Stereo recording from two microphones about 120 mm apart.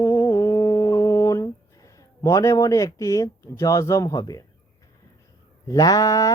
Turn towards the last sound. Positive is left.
turn(degrees=30)  # may be behind; listen again after turning